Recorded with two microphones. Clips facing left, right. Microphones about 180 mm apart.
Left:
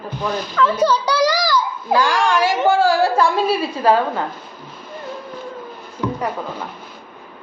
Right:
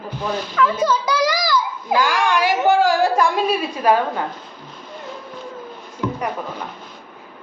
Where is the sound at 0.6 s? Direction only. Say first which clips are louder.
Left 2 dB; 35° left (ahead or behind).